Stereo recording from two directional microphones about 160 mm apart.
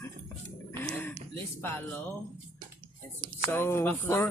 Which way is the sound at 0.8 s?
10° left (ahead or behind).